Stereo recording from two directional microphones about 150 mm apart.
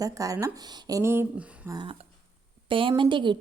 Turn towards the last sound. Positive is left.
turn(degrees=-30)  # may be behind; listen again after turning